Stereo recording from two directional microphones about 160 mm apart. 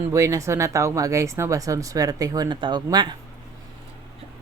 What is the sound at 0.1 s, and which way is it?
Speech, 20° right (ahead or behind).